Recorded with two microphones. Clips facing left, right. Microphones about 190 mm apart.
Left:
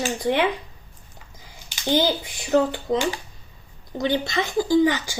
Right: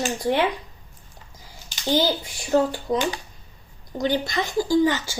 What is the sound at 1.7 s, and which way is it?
Speech, 20° left (ahead or behind).